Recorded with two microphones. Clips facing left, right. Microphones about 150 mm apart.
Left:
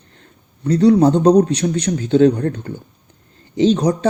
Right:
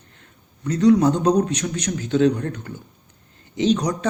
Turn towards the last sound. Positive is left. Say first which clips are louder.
# left 5 dB
turn(degrees=30)  # may be behind; listen again after turning